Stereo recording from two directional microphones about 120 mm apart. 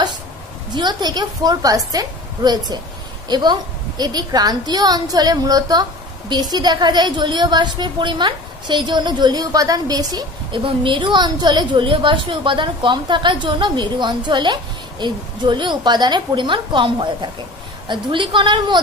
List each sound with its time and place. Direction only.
0.7 s a woman's voice: 35° right (ahead or behind)